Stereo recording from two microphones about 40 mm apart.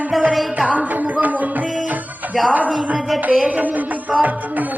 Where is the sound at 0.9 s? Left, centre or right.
Right.